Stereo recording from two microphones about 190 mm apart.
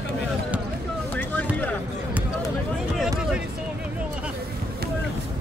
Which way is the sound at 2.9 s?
5° right (ahead or behind).